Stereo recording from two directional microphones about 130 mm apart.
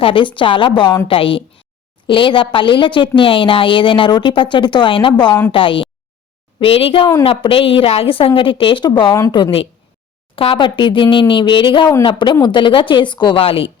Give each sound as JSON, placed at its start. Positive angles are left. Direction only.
{"t": 0.0, "sound": "a woman's voice", "side_deg": 40}
{"t": 9.3, "sound": "a woman's voice", "side_deg": 45}